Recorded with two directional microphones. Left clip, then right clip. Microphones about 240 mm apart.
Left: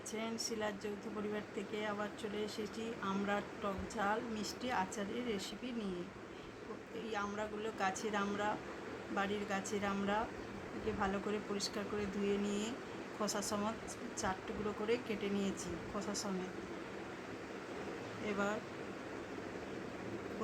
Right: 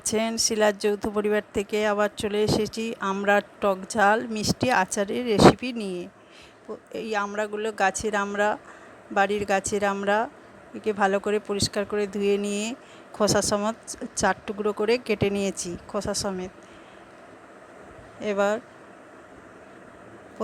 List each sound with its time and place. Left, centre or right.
0.0 s speech: right
6.9 s speech: right
18.3 s speech: right